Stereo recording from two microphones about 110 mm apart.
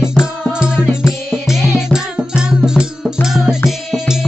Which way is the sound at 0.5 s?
10° right (ahead or behind).